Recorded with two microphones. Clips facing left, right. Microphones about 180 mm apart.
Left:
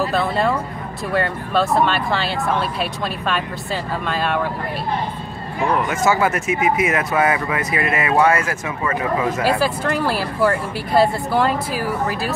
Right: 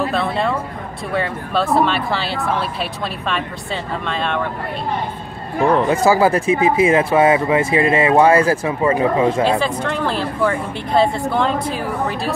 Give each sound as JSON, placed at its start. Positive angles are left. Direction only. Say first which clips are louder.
{"t": 0.0, "sound": "speech", "louder": "even", "side_deg": 0}
{"t": 5.6, "sound": "speech", "louder": "right 5 dB", "side_deg": -30}
{"t": 9.4, "sound": "speech", "louder": "right 2 dB", "side_deg": 5}